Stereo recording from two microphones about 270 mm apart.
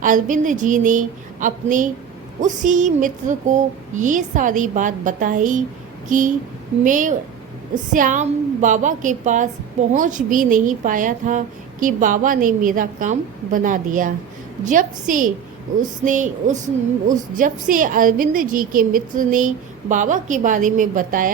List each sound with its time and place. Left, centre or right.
0.0 s a woman's voice: right